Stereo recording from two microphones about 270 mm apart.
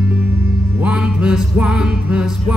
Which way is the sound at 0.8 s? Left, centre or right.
Centre.